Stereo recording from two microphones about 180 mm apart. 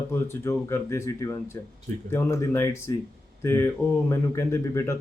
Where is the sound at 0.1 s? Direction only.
15° left (ahead or behind).